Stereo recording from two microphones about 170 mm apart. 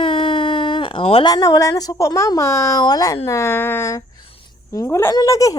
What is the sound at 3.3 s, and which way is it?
A woman's voice, 15° left (ahead or behind).